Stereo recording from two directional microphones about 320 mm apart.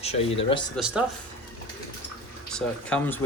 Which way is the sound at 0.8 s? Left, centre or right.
Centre.